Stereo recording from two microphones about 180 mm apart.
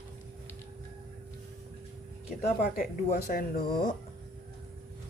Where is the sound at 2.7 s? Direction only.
55° left (ahead or behind).